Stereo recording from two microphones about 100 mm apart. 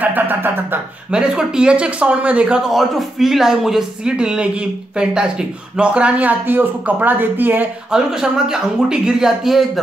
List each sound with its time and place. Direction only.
0.0 s speech: 20° right (ahead or behind)
1.1 s speech: 10° right (ahead or behind)
7.9 s speech: 5° right (ahead or behind)